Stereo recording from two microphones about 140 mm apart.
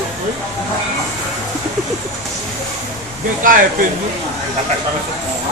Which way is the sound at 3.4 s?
75° right (ahead or behind).